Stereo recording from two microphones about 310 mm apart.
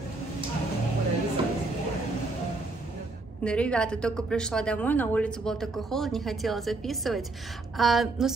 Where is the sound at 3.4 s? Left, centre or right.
Centre.